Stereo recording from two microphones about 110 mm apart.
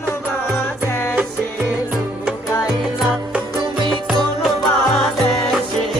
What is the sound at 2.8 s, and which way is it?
Music, centre (ahead or behind).